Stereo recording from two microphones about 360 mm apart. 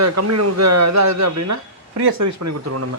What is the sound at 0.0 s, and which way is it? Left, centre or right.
Speech, right.